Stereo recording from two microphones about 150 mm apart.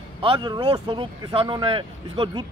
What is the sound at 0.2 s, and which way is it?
A man's voice, 35° right (ahead or behind).